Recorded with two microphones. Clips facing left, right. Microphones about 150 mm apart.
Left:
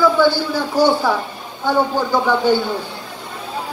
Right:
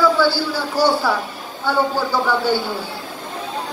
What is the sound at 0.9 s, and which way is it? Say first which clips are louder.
Speech: left 2 dB; 15° left (ahead or behind).